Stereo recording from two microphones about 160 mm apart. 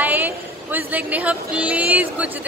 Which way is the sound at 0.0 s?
10° right (ahead or behind).